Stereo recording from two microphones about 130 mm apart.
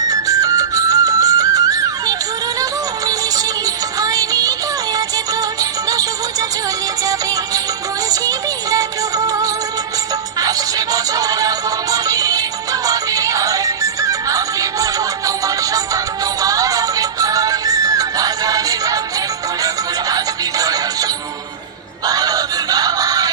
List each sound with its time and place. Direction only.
0.1 s music: 30° right (ahead or behind)
4.0 s music: 25° right (ahead or behind)
22.0 s synthetic singing: 30° right (ahead or behind)